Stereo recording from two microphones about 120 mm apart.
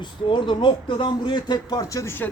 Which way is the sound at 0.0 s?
40° left (ahead or behind).